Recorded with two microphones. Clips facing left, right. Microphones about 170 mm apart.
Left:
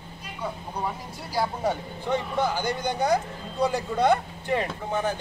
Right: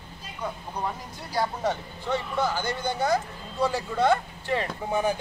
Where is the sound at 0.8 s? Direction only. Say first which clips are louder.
Even; 5° left (ahead or behind).